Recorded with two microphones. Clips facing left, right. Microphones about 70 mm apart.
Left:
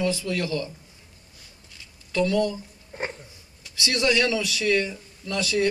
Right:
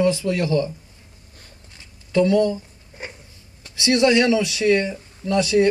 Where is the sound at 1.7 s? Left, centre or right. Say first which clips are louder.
Right 7 dB; right.